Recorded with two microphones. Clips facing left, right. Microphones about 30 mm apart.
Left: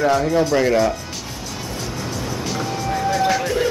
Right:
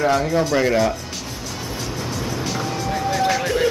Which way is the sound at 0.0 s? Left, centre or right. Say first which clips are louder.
Left 1 dB; centre.